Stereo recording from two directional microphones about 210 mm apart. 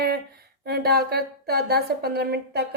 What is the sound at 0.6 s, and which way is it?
Speech, 50° right (ahead or behind).